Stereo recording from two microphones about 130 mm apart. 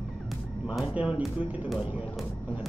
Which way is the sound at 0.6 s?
5° right (ahead or behind).